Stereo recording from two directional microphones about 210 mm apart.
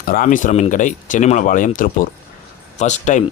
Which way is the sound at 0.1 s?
40° left (ahead or behind).